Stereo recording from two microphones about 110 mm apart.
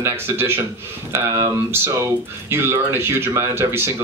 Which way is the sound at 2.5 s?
20° right (ahead or behind).